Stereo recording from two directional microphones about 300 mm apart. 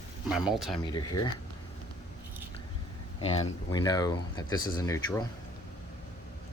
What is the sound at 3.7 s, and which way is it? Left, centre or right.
Speech, centre.